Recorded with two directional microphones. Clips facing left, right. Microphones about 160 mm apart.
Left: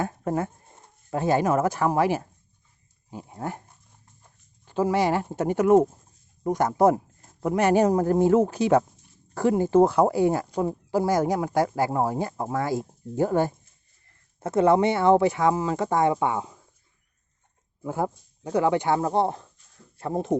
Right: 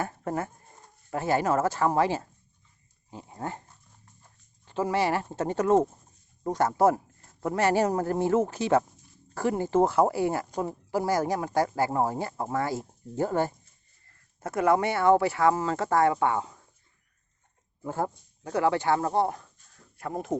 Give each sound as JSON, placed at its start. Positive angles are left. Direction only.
{"t": 0.0, "sound": "speech", "side_deg": 15}
{"t": 17.8, "sound": "speech", "side_deg": 15}